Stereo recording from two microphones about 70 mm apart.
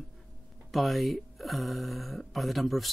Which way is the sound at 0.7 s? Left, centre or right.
Centre.